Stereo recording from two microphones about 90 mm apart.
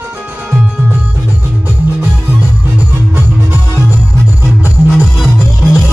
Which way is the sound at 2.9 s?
25° right (ahead or behind).